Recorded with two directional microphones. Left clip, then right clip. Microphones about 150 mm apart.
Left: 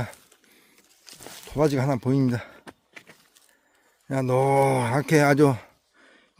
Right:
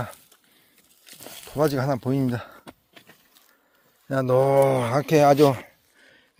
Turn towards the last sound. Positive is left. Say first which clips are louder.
# right 1 dB
turn(degrees=35)  # may be behind; listen again after turning